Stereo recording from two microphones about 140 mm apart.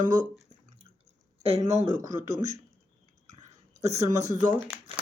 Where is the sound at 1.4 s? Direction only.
50° right (ahead or behind).